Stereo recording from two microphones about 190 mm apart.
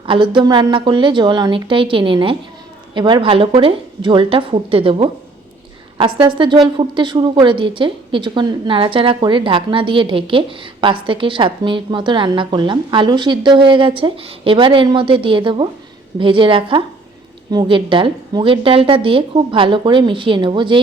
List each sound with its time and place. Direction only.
0.0 s a woman's voice: 25° right (ahead or behind)